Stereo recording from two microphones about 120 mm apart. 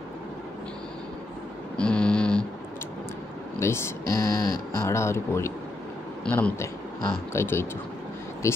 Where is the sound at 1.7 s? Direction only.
10° left (ahead or behind).